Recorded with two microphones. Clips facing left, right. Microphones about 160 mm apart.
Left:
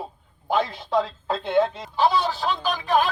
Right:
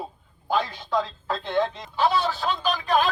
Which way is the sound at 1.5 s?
5° left (ahead or behind).